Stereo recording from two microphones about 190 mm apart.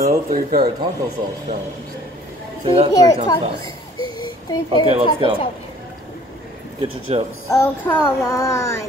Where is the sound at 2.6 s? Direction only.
30° right (ahead or behind).